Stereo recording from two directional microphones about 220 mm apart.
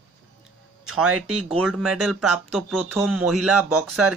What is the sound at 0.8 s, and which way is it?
Speech, 80° right.